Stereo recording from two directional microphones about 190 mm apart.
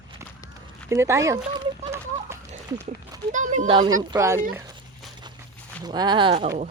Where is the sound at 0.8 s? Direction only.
15° right (ahead or behind).